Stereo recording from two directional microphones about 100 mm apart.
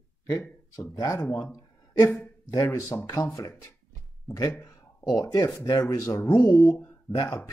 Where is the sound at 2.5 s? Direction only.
35° left (ahead or behind).